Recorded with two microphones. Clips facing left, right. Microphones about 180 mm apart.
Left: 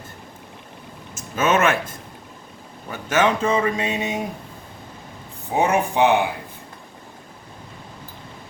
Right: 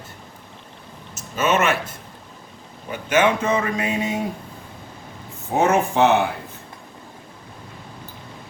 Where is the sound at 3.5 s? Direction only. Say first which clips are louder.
Left 1 dB; 25° left (ahead or behind).